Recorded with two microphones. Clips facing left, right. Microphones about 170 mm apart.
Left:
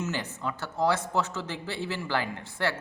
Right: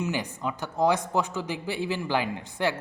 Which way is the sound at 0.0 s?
15° right (ahead or behind).